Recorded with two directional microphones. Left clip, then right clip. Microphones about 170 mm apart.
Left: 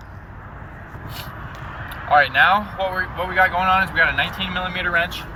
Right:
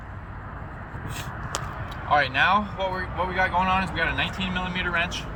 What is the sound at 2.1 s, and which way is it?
Speech, 10° right (ahead or behind).